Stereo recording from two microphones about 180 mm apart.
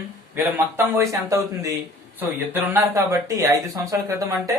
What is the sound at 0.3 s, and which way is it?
Speech, 10° right (ahead or behind).